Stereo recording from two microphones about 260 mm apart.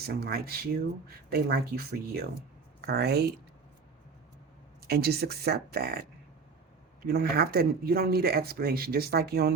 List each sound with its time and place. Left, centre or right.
0.0 s speech: right
4.9 s speech: right
7.0 s speech: right